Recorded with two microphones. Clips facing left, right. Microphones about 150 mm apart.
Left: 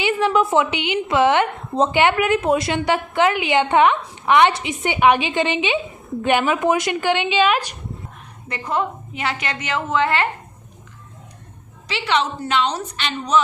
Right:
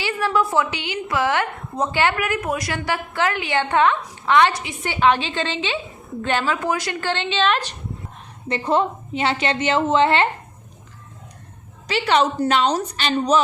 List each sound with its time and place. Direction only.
0.0 s a woman's voice: 20° left (ahead or behind)
8.4 s a woman's voice: 30° right (ahead or behind)
11.9 s a woman's voice: 45° right (ahead or behind)